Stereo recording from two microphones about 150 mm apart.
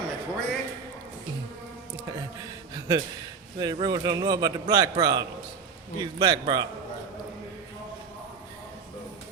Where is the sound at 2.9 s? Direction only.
30° right (ahead or behind).